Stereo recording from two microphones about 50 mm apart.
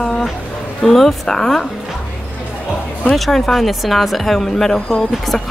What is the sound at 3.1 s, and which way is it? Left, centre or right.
A woman's voice, centre.